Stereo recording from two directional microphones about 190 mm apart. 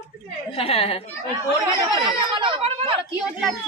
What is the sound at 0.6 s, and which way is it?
Speech, 30° left (ahead or behind).